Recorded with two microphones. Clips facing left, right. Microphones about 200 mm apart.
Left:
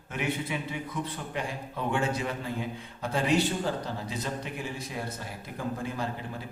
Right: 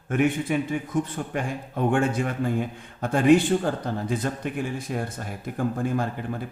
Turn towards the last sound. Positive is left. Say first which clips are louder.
# right 6 dB
turn(degrees=-50)  # may be behind; listen again after turning